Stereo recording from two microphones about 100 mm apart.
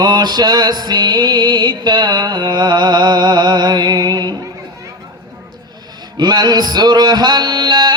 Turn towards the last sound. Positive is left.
turn(degrees=-45)  # may be behind; listen again after turning